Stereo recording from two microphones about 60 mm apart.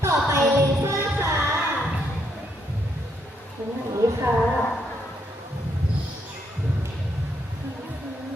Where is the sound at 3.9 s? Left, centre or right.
Right.